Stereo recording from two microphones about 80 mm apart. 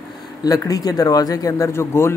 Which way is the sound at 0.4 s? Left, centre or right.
Left.